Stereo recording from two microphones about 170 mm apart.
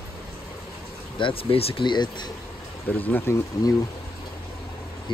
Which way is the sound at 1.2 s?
30° left (ahead or behind).